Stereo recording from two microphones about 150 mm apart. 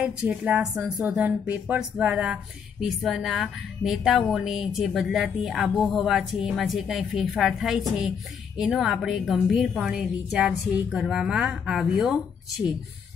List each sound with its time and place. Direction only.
0.0 s speech: 10° right (ahead or behind)